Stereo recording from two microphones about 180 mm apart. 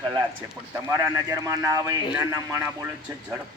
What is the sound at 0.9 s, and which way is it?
A man's voice, 20° right (ahead or behind).